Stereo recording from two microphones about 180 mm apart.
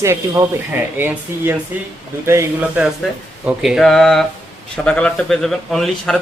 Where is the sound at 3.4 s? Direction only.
5° right (ahead or behind).